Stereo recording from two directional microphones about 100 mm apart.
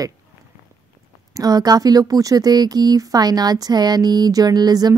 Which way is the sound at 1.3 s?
40° right (ahead or behind).